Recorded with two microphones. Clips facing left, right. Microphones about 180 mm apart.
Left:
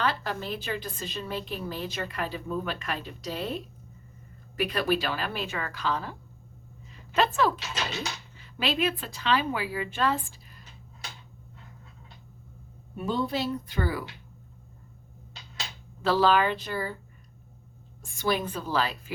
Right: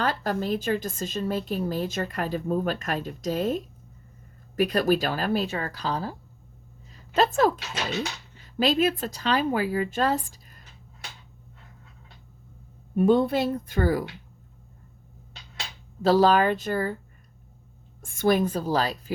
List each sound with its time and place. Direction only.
0.0 s a woman's voice: 45° right (ahead or behind)
13.0 s a woman's voice: 55° right (ahead or behind)
16.0 s a woman's voice: 40° right (ahead or behind)
18.0 s a woman's voice: 50° right (ahead or behind)